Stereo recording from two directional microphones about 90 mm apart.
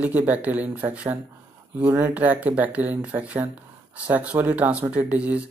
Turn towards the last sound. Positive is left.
turn(degrees=-15)  # may be behind; listen again after turning